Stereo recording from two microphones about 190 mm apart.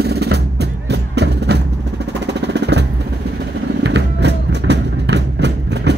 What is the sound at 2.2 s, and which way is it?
Jackhammer, 65° right (ahead or behind).